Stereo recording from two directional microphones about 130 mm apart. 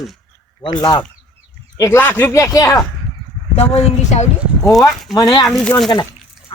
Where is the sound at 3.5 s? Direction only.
55° left (ahead or behind).